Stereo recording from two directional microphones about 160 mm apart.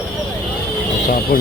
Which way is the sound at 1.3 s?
70° left (ahead or behind).